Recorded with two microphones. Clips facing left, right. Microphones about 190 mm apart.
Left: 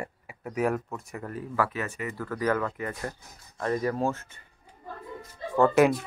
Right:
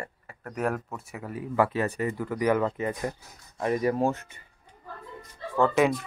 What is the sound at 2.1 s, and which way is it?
Speech, 15° right (ahead or behind).